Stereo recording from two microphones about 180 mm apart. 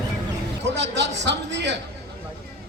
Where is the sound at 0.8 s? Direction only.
75° right (ahead or behind).